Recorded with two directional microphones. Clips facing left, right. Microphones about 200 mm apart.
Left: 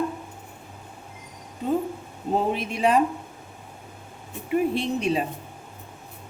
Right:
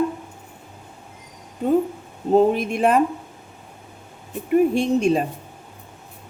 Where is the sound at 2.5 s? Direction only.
50° right (ahead or behind).